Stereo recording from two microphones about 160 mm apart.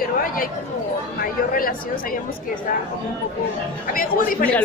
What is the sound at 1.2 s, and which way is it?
Speech, 60° left (ahead or behind).